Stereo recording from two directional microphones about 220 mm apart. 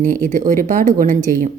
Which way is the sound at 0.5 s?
35° right (ahead or behind).